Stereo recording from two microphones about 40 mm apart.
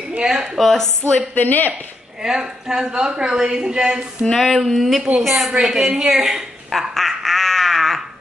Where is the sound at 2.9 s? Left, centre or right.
Right.